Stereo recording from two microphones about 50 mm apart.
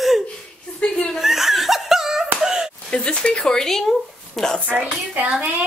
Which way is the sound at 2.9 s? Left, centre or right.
Centre.